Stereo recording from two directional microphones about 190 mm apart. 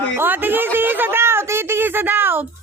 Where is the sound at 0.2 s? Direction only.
10° right (ahead or behind).